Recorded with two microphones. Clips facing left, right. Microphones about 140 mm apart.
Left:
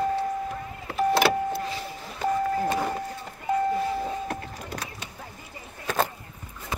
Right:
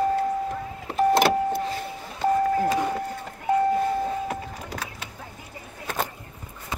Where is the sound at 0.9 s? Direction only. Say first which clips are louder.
Right 3 dB; 45° right (ahead or behind).